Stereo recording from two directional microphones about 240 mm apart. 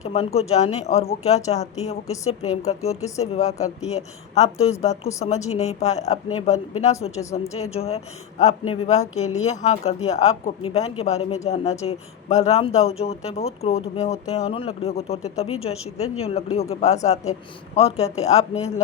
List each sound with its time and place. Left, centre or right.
0.0 s speech: left
5.0 s a woman's voice: centre
5.5 s speech: left
7.2 s a woman's voice: centre
7.5 s speech: left